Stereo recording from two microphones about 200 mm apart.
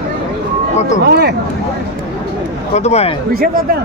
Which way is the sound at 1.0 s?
55° right (ahead or behind).